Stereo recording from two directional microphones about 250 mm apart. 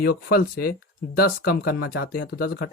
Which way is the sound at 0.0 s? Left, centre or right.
Left.